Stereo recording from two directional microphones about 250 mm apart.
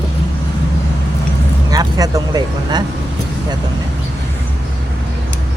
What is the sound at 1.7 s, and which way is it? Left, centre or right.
Speech, centre.